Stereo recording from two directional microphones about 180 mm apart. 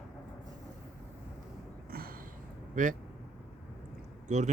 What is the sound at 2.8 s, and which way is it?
Speech, 50° right (ahead or behind).